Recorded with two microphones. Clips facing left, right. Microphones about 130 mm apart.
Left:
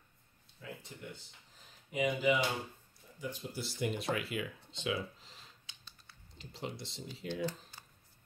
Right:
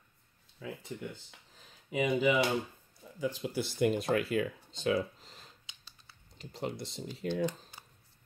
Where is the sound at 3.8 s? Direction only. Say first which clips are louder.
Right 7 dB; 45° right (ahead or behind).